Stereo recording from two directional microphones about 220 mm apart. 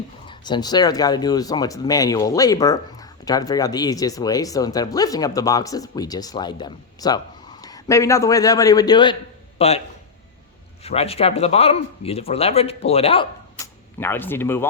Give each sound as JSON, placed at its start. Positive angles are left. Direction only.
{"t": 0.3, "sound": "a man's voice", "side_deg": 20}
{"t": 10.8, "sound": "speech", "side_deg": 25}
{"t": 14.0, "sound": "speech", "side_deg": 10}